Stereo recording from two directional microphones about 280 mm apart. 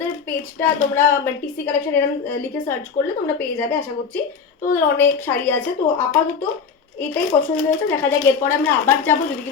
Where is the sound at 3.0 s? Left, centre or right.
Left.